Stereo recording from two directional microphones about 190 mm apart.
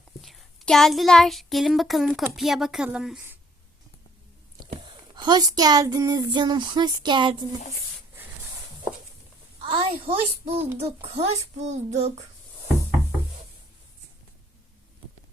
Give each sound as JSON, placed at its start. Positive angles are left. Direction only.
{"t": 0.2, "sound": "child singing", "side_deg": 0}
{"t": 5.1, "sound": "speech", "side_deg": -20}
{"t": 9.6, "sound": "a child's voice", "side_deg": -25}